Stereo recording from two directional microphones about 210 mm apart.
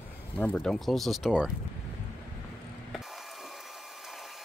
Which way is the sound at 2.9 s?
Centre (ahead or behind).